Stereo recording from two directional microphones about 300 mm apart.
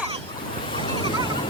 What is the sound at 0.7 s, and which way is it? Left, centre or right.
Waves, centre.